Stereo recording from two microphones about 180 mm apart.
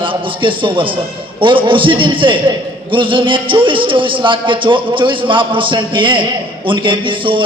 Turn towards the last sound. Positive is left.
turn(degrees=-30)  # may be behind; listen again after turning